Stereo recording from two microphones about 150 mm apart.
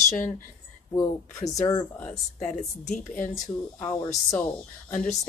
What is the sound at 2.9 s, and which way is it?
Speech, 60° left (ahead or behind).